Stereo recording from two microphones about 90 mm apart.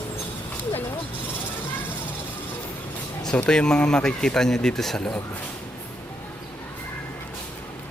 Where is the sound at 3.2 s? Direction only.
10° left (ahead or behind).